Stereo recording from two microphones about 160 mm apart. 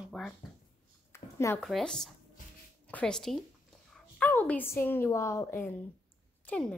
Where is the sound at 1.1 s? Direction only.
15° left (ahead or behind).